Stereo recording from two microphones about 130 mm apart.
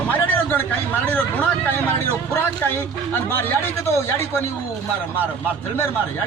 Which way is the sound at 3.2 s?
15° left (ahead or behind).